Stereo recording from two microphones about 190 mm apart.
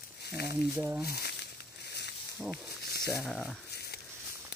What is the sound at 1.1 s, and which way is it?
Speech, 55° left (ahead or behind).